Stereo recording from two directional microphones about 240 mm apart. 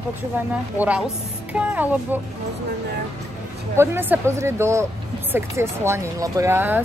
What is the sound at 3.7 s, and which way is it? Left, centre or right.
Speech, centre.